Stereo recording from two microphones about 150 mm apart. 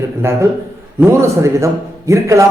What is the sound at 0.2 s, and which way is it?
A man's voice, 15° right (ahead or behind).